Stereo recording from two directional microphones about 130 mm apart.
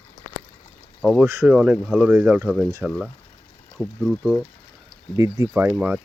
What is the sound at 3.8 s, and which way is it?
Speech, 5° left (ahead or behind).